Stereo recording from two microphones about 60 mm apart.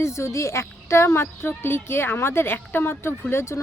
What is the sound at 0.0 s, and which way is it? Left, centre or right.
Speech, left.